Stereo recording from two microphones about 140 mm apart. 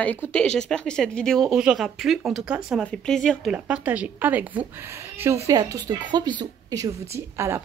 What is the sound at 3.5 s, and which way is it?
A woman's voice, 10° right (ahead or behind).